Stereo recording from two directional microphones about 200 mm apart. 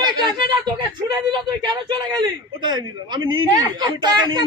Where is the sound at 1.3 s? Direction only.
20° right (ahead or behind).